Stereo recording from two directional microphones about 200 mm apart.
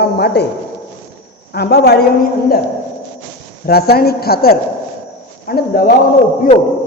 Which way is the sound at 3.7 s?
50° left (ahead or behind).